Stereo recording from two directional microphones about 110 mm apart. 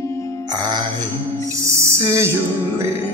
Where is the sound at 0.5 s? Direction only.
40° right (ahead or behind).